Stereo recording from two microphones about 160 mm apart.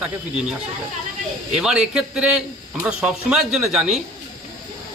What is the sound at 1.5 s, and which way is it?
Speech, 5° right (ahead or behind).